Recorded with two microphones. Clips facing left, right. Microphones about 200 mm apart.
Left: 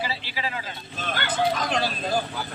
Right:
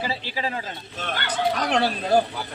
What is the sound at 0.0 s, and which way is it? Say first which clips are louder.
Speech: right 3 dB; 45° right (ahead or behind).